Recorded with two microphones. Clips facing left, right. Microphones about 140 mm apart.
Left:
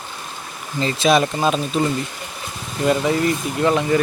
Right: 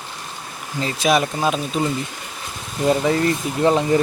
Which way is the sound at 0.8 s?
10° right (ahead or behind).